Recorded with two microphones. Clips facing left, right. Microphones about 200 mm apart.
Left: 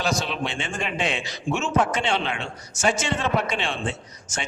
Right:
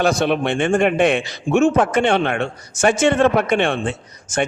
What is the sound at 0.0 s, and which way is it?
A man's voice, 55° right (ahead or behind).